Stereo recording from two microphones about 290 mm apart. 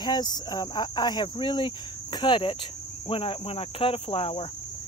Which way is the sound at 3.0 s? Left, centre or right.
Centre.